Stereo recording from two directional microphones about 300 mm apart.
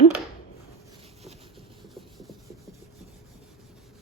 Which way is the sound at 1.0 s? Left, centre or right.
Centre.